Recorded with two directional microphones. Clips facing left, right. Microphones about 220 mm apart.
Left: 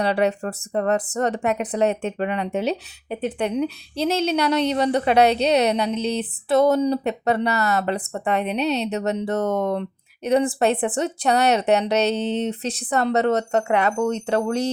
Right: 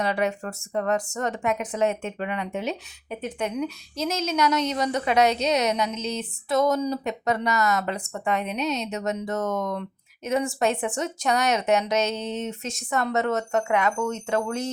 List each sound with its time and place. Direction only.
0.0 s speech: 35° left (ahead or behind)